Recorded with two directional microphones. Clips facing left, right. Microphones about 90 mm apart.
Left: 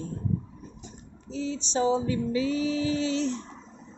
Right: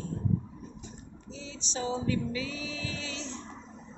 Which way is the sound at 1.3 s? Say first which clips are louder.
Left 12 dB; 45° left (ahead or behind).